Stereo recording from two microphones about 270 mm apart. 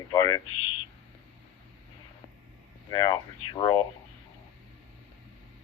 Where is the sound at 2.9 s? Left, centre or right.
Centre.